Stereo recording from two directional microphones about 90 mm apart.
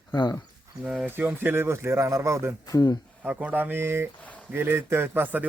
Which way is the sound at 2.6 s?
45° left (ahead or behind).